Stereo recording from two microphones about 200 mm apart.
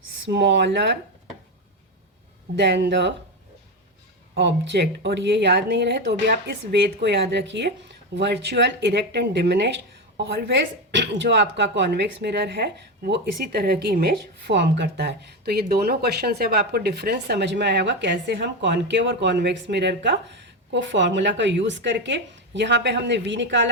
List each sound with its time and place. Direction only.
0.3 s speech: 60° right (ahead or behind)
2.6 s speech: 60° right (ahead or behind)
4.4 s speech: 60° right (ahead or behind)